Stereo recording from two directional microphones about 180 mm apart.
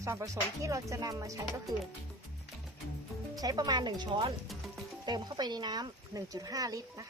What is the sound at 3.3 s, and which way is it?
Speech, 20° right (ahead or behind).